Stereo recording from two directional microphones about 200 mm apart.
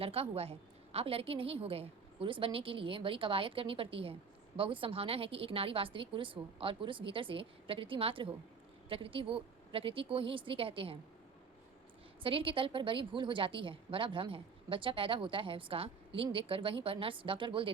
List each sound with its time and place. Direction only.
0.0 s a woman's voice: 30° right (ahead or behind)
12.2 s a woman's voice: 25° right (ahead or behind)